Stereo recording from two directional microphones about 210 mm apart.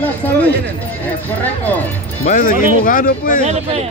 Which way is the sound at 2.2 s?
40° left (ahead or behind).